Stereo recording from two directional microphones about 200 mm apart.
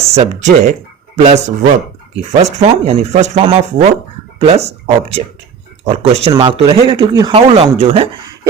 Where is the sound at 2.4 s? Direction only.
35° right (ahead or behind).